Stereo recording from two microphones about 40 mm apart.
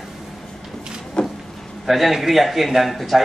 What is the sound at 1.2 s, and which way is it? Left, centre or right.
Vehicle, left.